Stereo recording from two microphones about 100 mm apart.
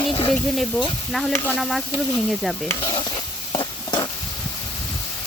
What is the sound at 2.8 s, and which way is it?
Stir, 50° left (ahead or behind).